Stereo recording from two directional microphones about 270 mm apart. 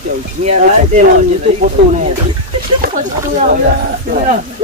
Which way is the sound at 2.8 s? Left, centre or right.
Right.